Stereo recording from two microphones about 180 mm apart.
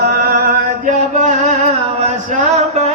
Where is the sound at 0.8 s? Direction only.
45° right (ahead or behind).